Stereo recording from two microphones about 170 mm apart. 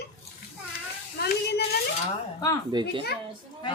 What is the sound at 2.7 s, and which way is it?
Speech, 25° right (ahead or behind).